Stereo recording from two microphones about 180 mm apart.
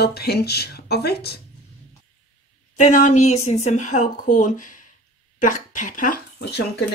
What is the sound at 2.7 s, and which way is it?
Speech, 40° left (ahead or behind).